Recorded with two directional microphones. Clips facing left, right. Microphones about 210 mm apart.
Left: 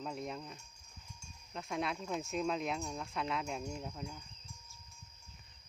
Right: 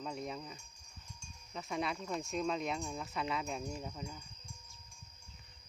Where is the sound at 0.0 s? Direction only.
Centre (ahead or behind).